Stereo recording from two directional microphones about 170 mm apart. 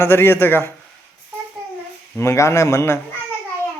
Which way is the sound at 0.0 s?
15° left (ahead or behind).